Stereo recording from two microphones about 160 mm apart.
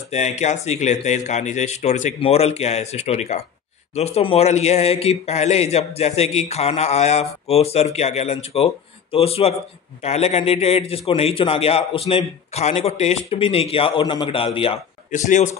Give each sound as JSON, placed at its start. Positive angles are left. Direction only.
{"t": 0.1, "sound": "a man's voice", "side_deg": 45}
{"t": 15.0, "sound": "speech", "side_deg": 50}